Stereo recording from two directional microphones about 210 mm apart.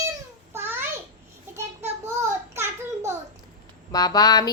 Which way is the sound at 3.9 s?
20° left (ahead or behind).